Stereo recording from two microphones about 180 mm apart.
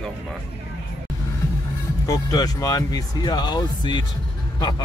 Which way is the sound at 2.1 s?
20° left (ahead or behind).